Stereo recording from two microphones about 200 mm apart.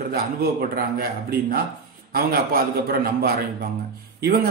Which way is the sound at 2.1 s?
50° right (ahead or behind).